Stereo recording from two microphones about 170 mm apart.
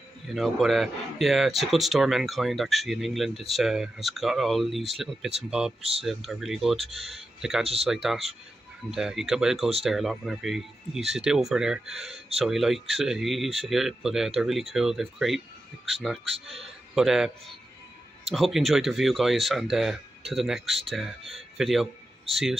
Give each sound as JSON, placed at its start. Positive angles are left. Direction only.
{"t": 0.3, "sound": "speech", "side_deg": 0}
{"t": 5.8, "sound": "speech", "side_deg": -35}
{"t": 6.0, "sound": "a man's voice", "side_deg": 0}
{"t": 18.3, "sound": "speech", "side_deg": 0}